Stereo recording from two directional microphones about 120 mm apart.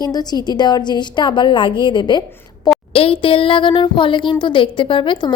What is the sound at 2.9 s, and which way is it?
A woman's voice, 50° left (ahead or behind).